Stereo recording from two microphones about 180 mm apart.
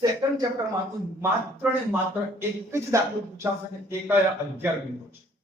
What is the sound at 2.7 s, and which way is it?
Speech, 15° right (ahead or behind).